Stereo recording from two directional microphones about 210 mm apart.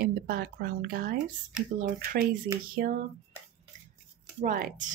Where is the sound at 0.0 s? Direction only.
45° right (ahead or behind).